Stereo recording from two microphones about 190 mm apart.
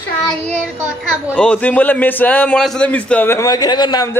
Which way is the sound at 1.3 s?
5° left (ahead or behind).